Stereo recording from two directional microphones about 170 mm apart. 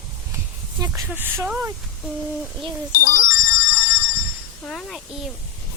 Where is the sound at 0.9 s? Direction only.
10° right (ahead or behind).